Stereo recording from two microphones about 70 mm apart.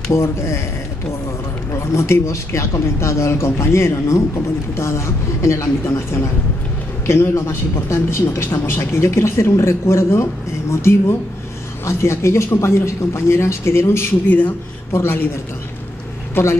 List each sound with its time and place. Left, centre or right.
0.1 s speech: left
1.7 s speech: left
14.9 s speech: left
16.4 s speech: left